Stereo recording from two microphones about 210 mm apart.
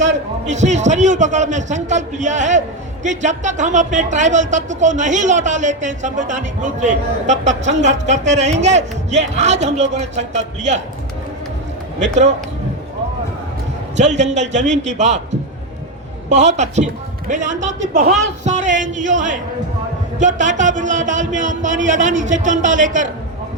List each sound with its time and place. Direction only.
0.4 s a man's voice: 35° right (ahead or behind)
13.9 s a man's voice: 35° right (ahead or behind)